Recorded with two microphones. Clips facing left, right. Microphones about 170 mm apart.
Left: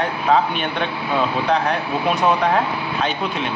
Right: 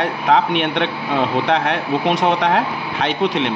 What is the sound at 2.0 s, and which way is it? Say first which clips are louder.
Speech: even; 90° right.